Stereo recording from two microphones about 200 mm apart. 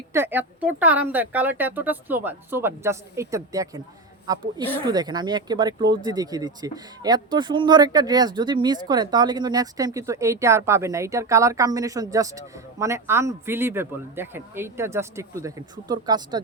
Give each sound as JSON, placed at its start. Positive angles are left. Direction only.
{"t": 0.1, "sound": "speech", "side_deg": -10}